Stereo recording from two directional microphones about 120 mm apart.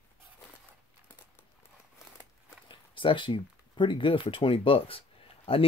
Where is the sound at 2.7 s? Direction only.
45° left (ahead or behind).